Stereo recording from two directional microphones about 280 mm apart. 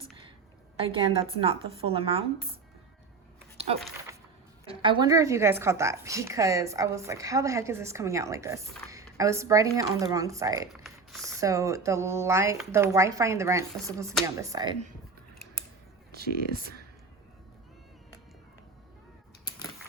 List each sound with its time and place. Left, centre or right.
0.8 s a woman's voice: centre
4.6 s a woman's voice: centre
10.8 s a sound: centre
11.3 s a woman's voice: centre
16.1 s speech: right